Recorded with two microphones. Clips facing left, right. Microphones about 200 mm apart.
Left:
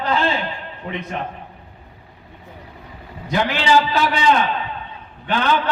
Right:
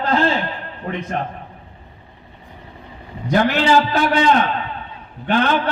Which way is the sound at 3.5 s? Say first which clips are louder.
Right 2 dB; 50° right (ahead or behind).